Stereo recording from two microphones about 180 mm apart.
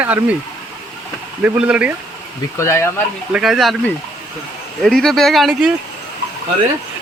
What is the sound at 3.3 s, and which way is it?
Speech, 5° right (ahead or behind).